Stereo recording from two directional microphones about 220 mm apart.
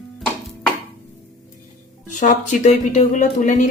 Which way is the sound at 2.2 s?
30° left (ahead or behind).